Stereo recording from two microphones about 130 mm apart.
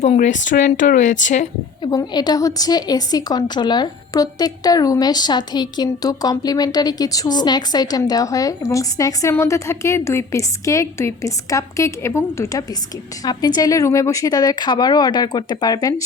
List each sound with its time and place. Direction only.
0.0 s speech: 65° left (ahead or behind)
1.8 s a woman's voice: 30° left (ahead or behind)